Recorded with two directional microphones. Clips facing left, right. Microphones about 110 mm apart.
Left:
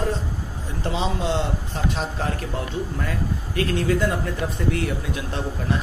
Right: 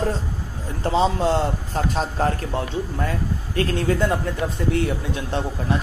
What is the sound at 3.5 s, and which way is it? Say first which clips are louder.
Speech: right 1 dB; 35° right (ahead or behind).